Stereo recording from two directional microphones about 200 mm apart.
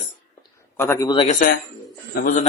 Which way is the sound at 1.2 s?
40° left (ahead or behind).